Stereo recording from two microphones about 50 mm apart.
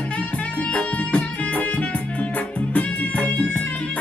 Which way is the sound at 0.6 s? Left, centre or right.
Left.